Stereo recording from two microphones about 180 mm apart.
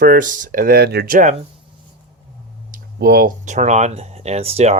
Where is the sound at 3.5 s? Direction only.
40° right (ahead or behind).